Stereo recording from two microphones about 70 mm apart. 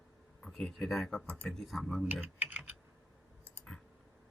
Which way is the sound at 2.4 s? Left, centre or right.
Right.